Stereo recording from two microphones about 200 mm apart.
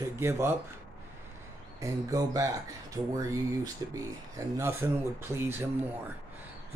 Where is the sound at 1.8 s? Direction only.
15° right (ahead or behind).